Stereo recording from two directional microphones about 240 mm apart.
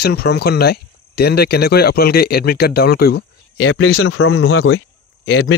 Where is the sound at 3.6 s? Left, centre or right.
Left.